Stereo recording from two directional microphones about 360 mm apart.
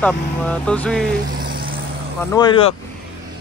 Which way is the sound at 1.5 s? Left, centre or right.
Right.